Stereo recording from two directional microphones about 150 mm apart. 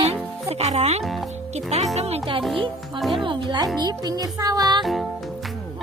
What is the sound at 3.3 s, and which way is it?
Speech, 30° right (ahead or behind).